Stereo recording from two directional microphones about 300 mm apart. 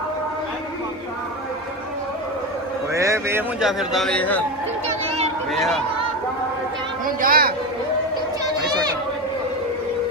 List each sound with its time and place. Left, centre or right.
2.9 s a man's voice: centre
4.9 s a sound: right
7.2 s speech: right